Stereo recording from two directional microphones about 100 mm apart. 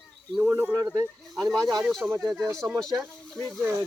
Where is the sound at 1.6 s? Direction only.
40° right (ahead or behind).